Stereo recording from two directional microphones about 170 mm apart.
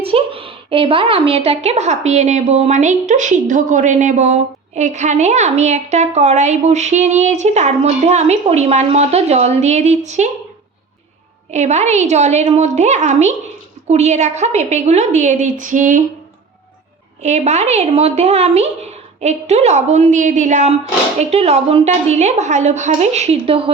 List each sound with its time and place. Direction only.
0.0 s a woman's voice: 35° right (ahead or behind)
11.5 s a woman's voice: 40° right (ahead or behind)
17.2 s a woman's voice: 40° right (ahead or behind)